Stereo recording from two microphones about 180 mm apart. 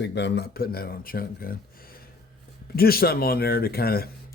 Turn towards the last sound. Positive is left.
turn(degrees=60)  # may be behind; listen again after turning